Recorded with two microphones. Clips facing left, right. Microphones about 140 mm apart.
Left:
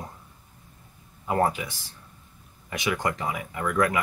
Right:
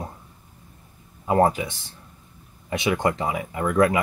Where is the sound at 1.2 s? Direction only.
30° right (ahead or behind).